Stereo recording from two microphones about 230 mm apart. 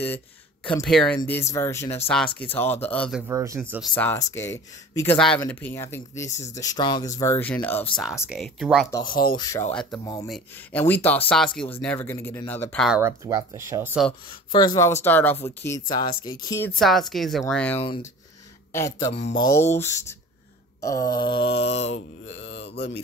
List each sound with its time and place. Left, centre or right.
0.8 s speech: centre
3.9 s speech: centre
7.9 s speech: centre
9.3 s speech: centre
13.0 s speech: centre
14.5 s speech: centre
17.7 s a sound: left
18.7 s speech: centre
19.1 s a sound: left
19.4 s speech: centre
21.2 s a sound: left
22.4 s mantra: left